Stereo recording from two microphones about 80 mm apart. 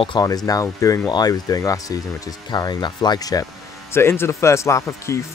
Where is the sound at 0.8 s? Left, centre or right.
Left.